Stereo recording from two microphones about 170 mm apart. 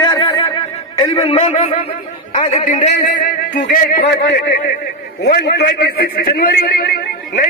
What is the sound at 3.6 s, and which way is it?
A man's voice, 55° left (ahead or behind).